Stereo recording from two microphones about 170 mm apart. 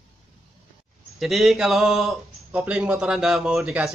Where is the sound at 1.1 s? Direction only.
Centre (ahead or behind).